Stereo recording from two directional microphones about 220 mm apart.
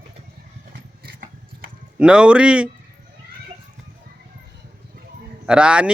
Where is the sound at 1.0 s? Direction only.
40° right (ahead or behind).